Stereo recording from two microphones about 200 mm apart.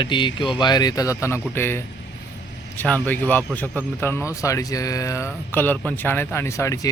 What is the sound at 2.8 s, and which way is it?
Speech, 10° left (ahead or behind).